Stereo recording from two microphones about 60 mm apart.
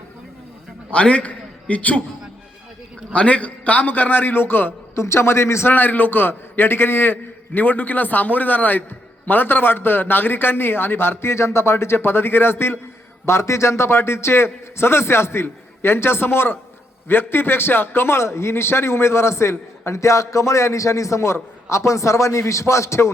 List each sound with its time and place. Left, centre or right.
0.9 s a man's voice: centre
3.1 s a man's voice: left
5.0 s a man's voice: left
5.7 s a man's voice: left
13.2 s a man's voice: left